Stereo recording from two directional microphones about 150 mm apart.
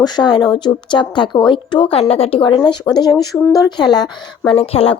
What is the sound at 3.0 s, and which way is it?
A woman's voice, 25° left (ahead or behind).